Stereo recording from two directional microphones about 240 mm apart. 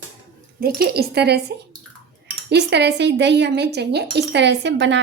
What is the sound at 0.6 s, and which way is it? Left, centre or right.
Speech, right.